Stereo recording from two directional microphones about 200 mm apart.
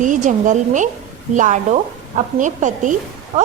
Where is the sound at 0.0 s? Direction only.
40° right (ahead or behind).